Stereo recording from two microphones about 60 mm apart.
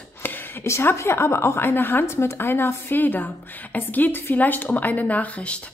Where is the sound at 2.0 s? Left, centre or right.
Left.